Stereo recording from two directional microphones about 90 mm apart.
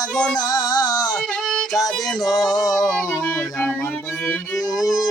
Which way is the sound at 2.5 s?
45° left (ahead or behind).